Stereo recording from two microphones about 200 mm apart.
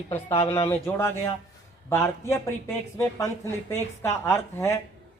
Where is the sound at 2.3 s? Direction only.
15° left (ahead or behind).